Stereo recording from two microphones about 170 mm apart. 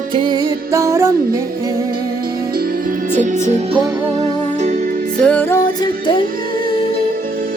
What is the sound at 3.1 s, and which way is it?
Music, 45° right (ahead or behind).